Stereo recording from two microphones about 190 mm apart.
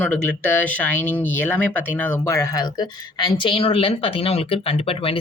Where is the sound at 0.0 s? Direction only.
10° left (ahead or behind).